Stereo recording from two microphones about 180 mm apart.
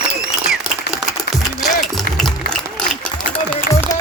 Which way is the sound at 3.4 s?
10° left (ahead or behind).